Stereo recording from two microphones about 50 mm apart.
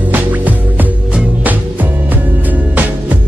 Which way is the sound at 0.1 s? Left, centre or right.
Right.